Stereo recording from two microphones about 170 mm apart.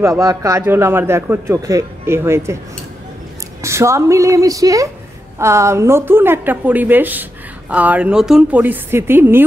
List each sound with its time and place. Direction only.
0.0 s a man's voice: 20° right (ahead or behind)
3.6 s a man's voice: 15° right (ahead or behind)